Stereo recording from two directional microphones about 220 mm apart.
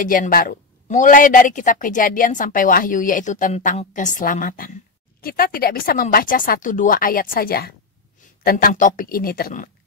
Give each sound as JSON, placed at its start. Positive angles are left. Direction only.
{"t": 0.0, "sound": "speech", "side_deg": 40}